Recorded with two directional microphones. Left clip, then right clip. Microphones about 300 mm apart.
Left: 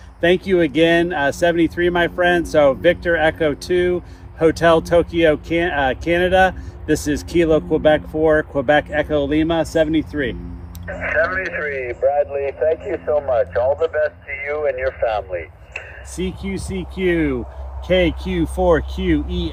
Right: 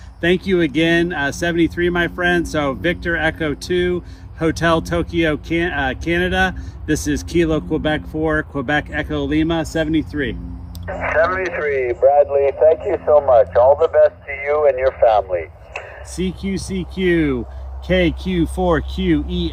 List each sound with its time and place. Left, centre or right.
0.2 s speech: centre
10.8 s speech: right
16.1 s speech: centre